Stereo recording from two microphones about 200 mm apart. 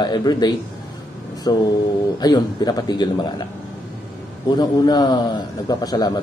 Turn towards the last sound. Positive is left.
turn(degrees=20)  # may be behind; listen again after turning